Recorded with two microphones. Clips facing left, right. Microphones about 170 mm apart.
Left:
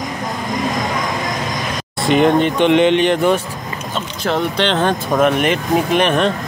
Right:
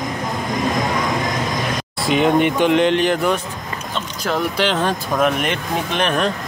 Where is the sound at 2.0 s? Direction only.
Centre (ahead or behind).